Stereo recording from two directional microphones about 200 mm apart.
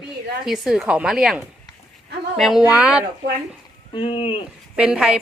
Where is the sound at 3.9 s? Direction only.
25° left (ahead or behind).